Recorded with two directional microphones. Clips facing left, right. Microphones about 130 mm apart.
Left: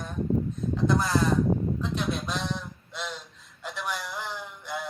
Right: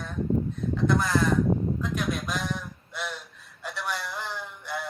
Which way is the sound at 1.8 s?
30° left (ahead or behind).